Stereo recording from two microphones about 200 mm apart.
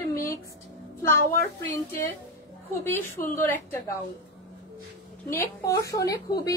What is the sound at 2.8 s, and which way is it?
Speech, 10° left (ahead or behind).